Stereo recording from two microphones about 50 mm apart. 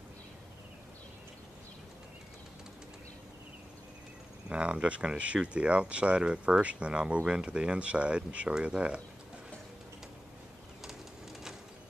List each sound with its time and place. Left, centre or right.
4.5 s speech: right